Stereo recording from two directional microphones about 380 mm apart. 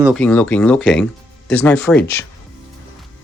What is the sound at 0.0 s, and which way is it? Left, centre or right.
Speech, centre.